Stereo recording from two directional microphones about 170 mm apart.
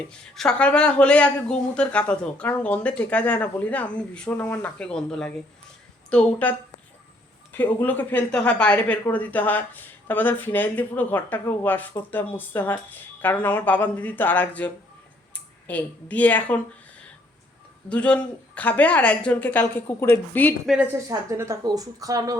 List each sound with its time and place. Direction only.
0.1 s speech: 5° left (ahead or behind)
17.8 s speech: 5° left (ahead or behind)
21.1 s speech: 15° right (ahead or behind)